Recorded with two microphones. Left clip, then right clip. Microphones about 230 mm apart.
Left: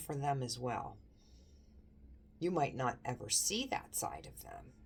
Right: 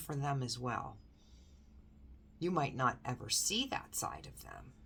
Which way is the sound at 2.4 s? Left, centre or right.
Centre.